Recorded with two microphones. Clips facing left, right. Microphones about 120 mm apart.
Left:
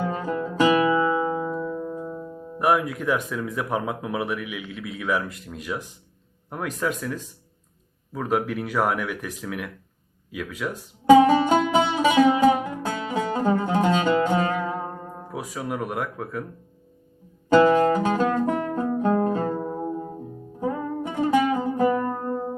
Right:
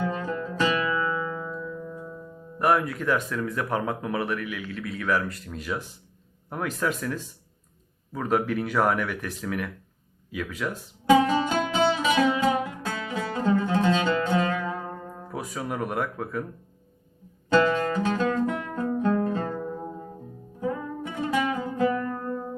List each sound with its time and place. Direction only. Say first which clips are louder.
0.0 s music: left 2 dB; 20° left (ahead or behind)
1.5 s music: left 6 dB; 45° left (ahead or behind)
2.6 s speech: left 1 dB; 5° left (ahead or behind)
11.1 s music: left 6 dB; 20° left (ahead or behind)
13.3 s music: even; 35° left (ahead or behind)
13.7 s music: left 2 dB; 20° left (ahead or behind)
15.3 s speech: left 1 dB; 5° left (ahead or behind)
17.5 s music: left 5 dB; 25° left (ahead or behind)
18.1 s music: left 3 dB; 40° left (ahead or behind)
18.9 s music: left 2 dB; 25° left (ahead or behind)